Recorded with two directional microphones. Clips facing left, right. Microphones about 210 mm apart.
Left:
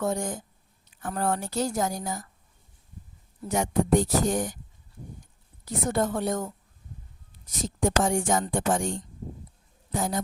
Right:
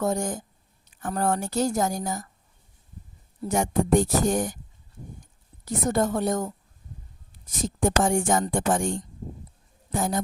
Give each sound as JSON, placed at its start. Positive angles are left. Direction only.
{"t": 0.0, "sound": "a woman's voice", "side_deg": -45}
{"t": 3.5, "sound": "a woman's voice", "side_deg": -45}
{"t": 5.6, "sound": "a woman's voice", "side_deg": -45}
{"t": 7.6, "sound": "a woman's voice", "side_deg": -50}